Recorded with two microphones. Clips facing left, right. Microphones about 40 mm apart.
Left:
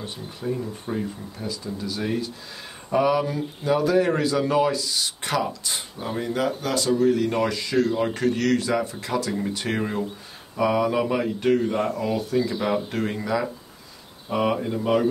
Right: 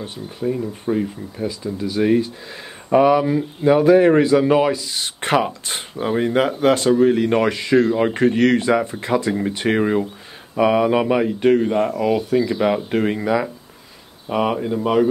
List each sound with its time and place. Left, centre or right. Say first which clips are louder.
0.4 s speech: right 6 dB; centre
4.9 s speech: right 6 dB; right; by 12.0 s centre
12.0 s speech: right 6 dB; right
14.3 s speech: right 3 dB; centre